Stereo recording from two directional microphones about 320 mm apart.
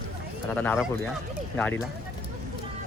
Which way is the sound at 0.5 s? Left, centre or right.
Centre.